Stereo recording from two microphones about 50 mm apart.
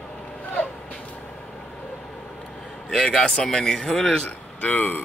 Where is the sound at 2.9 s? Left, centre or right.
Centre.